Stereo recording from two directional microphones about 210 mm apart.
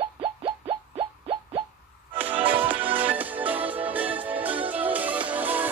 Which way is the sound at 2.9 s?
10° right (ahead or behind).